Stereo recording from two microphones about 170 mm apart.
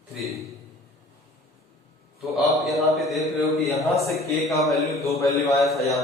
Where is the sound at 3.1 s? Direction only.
Centre (ahead or behind).